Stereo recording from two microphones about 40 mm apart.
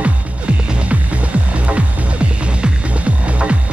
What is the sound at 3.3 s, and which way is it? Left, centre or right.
Music, right.